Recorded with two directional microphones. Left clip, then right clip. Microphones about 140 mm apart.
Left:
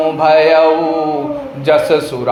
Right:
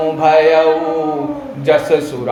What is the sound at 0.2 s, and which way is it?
Speech, 25° left (ahead or behind).